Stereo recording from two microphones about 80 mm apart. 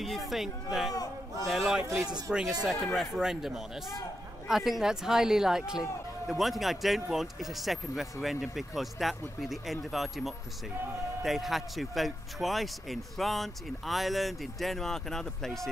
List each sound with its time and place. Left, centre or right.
0.3 s speech: centre
2.3 s speech: centre
2.6 s speech: centre